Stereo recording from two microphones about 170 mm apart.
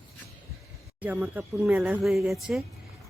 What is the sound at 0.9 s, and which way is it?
Speech, 10° right (ahead or behind).